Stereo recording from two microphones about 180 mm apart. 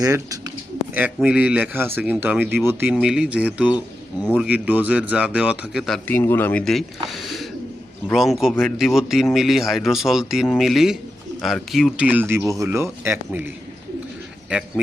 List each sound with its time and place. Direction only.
0.0 s a man's voice: 20° right (ahead or behind); by 6.0 s centre (ahead or behind)
6.1 s a man's voice: 10° left (ahead or behind); by 13.5 s 10° right (ahead or behind)